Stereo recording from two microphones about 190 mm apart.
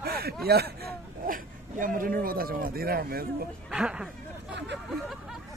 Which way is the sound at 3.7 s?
5° right (ahead or behind).